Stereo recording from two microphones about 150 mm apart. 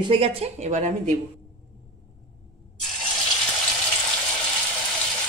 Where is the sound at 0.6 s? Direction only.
55° right (ahead or behind).